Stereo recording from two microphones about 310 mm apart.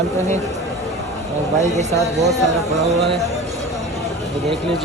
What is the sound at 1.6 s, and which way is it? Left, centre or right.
Speech, right.